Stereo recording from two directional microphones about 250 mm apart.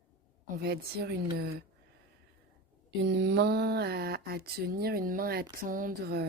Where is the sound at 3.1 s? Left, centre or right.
Right.